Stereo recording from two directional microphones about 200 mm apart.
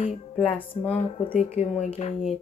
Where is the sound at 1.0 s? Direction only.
30° left (ahead or behind).